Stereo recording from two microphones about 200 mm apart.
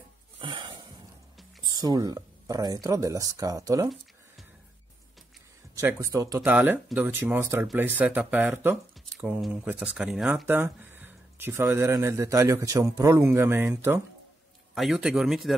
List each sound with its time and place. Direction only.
0.4 s a sound: 25° right (ahead or behind)
1.8 s speech: 20° right (ahead or behind)
5.8 s speech: 15° right (ahead or behind)
14.7 s speech: centre (ahead or behind)